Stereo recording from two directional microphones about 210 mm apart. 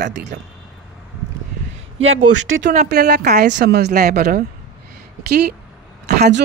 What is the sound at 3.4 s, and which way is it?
Speech, 55° right (ahead or behind).